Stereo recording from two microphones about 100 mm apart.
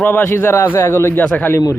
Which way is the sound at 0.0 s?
20° left (ahead or behind).